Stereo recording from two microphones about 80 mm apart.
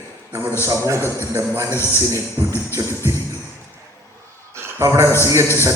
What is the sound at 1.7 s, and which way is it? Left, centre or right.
Speech, left.